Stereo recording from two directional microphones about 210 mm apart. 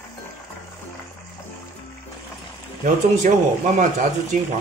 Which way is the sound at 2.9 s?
35° right (ahead or behind).